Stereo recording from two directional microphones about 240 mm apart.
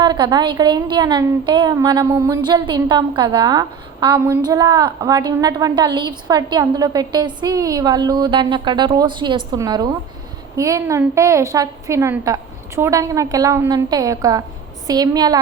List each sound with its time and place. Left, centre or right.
0.0 s a woman's voice: centre